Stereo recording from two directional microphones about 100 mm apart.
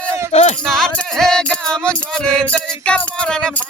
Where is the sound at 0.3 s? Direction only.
90° left.